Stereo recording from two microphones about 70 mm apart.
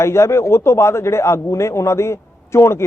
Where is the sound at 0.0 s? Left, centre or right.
Left.